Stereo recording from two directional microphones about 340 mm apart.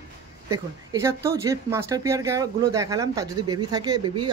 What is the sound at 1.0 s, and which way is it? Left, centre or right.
Speech, centre.